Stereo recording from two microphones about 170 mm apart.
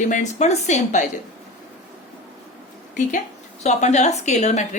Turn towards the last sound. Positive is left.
turn(degrees=40)  # may be behind; listen again after turning